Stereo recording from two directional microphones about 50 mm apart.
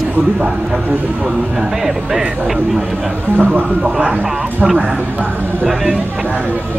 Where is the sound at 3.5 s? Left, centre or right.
Right.